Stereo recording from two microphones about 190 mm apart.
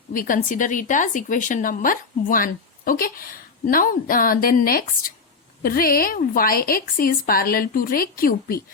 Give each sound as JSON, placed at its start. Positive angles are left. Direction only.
{"t": 0.1, "sound": "a woman's voice", "side_deg": 45}